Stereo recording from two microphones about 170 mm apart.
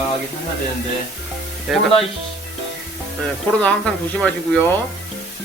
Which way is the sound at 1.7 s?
Centre (ahead or behind).